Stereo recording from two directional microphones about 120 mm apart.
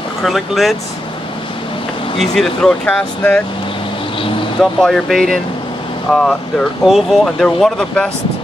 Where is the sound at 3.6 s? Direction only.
45° left (ahead or behind).